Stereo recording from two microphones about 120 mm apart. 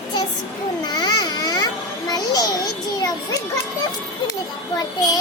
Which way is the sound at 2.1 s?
30° left (ahead or behind).